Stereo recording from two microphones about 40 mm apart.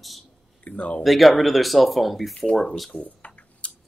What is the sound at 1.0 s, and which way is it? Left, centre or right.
Speech, centre.